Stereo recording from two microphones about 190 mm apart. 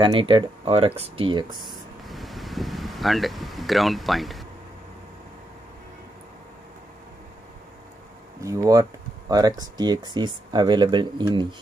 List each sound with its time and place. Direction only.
0.0 s speech: 25° right (ahead or behind)
1.6 s vehicle: centre (ahead or behind)
8.4 s speech: 15° right (ahead or behind)